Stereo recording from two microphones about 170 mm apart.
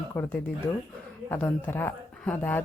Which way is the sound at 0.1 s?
10° left (ahead or behind).